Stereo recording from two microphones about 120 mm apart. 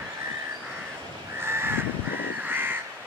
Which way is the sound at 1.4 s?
20° right (ahead or behind).